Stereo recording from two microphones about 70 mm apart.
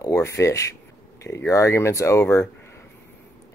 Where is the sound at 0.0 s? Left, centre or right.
Left.